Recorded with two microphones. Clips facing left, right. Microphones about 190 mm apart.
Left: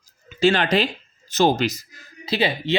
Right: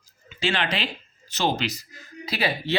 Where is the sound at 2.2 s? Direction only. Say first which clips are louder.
Left 4 dB; 25° left (ahead or behind).